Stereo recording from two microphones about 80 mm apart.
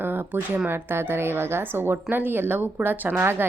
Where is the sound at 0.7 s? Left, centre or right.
Right.